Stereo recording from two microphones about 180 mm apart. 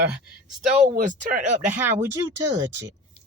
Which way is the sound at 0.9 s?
45° right (ahead or behind).